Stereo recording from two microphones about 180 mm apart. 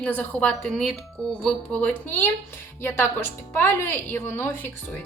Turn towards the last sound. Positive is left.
turn(degrees=10)  # may be behind; listen again after turning